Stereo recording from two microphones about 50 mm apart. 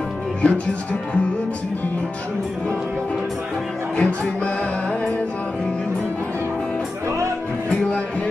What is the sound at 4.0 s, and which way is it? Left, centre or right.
Music, left.